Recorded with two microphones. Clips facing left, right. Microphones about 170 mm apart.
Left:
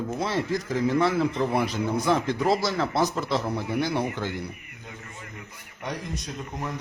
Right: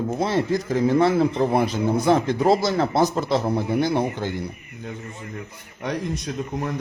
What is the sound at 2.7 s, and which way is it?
A man's voice, 40° right (ahead or behind).